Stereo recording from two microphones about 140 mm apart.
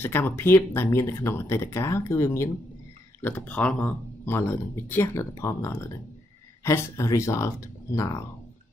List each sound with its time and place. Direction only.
0.0 s speech: 15° left (ahead or behind)